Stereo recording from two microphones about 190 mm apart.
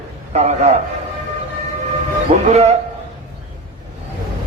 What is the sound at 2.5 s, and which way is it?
Speech, 35° right (ahead or behind).